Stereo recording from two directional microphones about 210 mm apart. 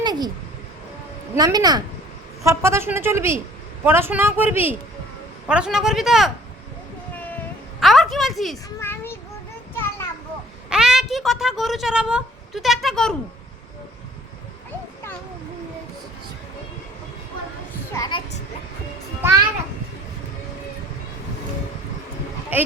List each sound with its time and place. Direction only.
0.0 s a sound: 20° right (ahead or behind)
1.4 s speech: 20° right (ahead or behind); by 6.3 s centre (ahead or behind)
7.8 s a sound: centre (ahead or behind)
8.8 s child singing: 10° left (ahead or behind)
9.7 s children playing: 10° left (ahead or behind)
10.7 s a woman's voice: 5° right (ahead or behind)
17.9 s a child's voice: 15° left (ahead or behind)
22.5 s speech: 10° right (ahead or behind)